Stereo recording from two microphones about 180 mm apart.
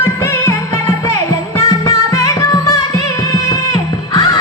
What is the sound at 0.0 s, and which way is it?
Music, 15° left (ahead or behind).